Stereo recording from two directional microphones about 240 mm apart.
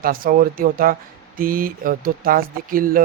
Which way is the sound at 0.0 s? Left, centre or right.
Right.